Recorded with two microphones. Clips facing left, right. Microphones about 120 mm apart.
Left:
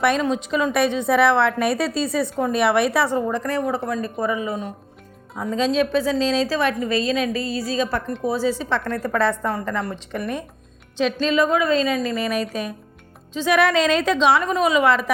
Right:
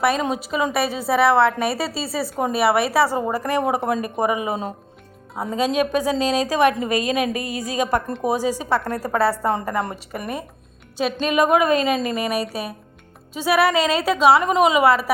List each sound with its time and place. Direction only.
0.2 s a woman's voice: 10° right (ahead or behind)
3.8 s a woman's voice: 25° right (ahead or behind)
5.5 s a woman's voice: 10° right (ahead or behind)